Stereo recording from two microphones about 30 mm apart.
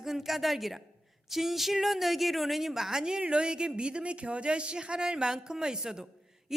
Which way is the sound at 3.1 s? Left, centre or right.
Right.